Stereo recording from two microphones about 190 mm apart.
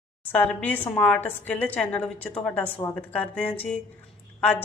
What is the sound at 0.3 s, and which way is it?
A woman's voice, 10° left (ahead or behind).